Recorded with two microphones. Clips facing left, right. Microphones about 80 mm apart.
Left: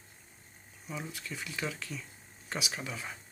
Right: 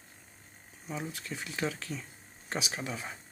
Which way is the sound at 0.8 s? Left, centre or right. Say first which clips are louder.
Right 2 dB; right.